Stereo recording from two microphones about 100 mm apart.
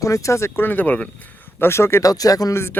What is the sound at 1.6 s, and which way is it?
Speech, 25° left (ahead or behind).